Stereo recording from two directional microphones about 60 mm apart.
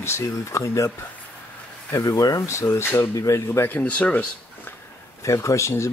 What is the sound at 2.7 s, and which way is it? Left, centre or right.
Speech, left.